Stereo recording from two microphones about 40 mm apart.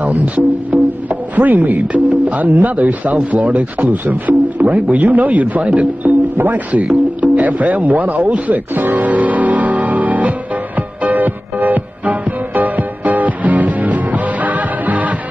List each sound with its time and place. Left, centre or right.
0.0 s speech: right
4.7 s speech: right
6.3 s speech: right
6.7 s speech: right
8.9 s music: right